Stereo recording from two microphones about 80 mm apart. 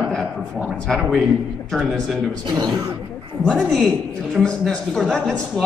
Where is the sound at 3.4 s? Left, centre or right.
Centre.